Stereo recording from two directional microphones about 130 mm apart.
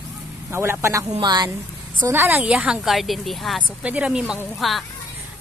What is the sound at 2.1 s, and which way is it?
A woman's voice, 15° right (ahead or behind).